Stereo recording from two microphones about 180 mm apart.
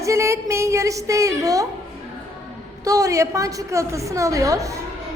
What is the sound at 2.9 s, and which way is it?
A woman's voice, 20° right (ahead or behind).